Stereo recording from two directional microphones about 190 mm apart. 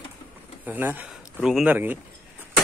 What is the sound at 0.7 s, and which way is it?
A man's voice, 10° right (ahead or behind).